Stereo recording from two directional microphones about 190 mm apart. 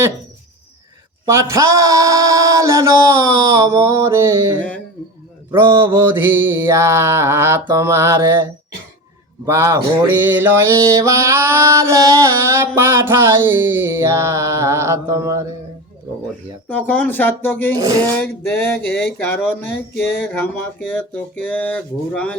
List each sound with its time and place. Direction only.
1.2 s mantra: 15° right (ahead or behind)
5.7 s music: 15° right (ahead or behind)
9.5 s music: 15° right (ahead or behind)
16.6 s speech: 10° left (ahead or behind)
17.7 s speech: 20° right (ahead or behind)
18.2 s speech: 10° left (ahead or behind)